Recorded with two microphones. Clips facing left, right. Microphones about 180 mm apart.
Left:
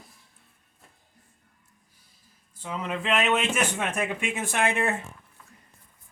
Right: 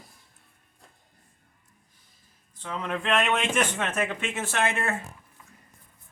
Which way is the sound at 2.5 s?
10° left (ahead or behind).